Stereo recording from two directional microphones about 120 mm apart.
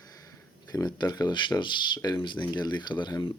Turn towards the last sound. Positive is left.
turn(degrees=40)  # may be behind; listen again after turning